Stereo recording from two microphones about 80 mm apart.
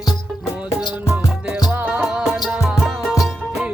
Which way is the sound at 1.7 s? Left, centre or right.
Right.